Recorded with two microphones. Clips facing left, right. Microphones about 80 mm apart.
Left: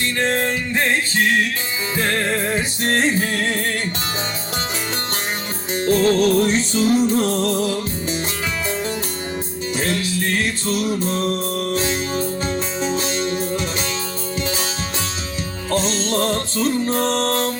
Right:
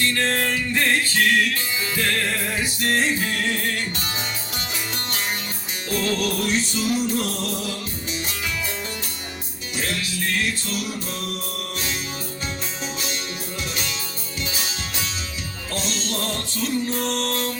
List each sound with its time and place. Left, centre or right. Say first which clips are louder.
0.0 s music: left 2 dB; left
5.8 s music: left 8 dB; left
9.7 s music: left 5 dB; left
15.7 s music: left 8 dB; left